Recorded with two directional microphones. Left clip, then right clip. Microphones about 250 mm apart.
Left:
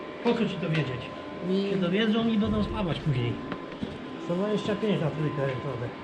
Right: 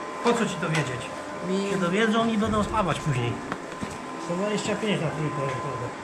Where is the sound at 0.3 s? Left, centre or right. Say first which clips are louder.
Right 3 dB; right.